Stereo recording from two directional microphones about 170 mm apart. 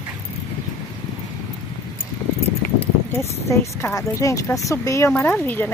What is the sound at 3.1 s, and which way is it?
Speech, 15° left (ahead or behind).